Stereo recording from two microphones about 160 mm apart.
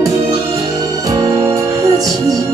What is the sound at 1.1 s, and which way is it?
Music, 20° right (ahead or behind).